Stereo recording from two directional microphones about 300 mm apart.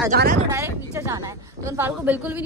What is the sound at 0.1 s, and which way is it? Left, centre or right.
Speech, right.